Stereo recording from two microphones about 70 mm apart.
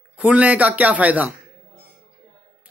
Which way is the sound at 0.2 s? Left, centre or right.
Centre.